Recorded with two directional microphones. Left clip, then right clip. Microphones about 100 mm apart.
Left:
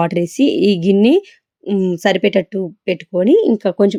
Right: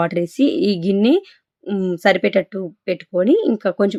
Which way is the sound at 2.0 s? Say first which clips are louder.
Even; 30° left (ahead or behind).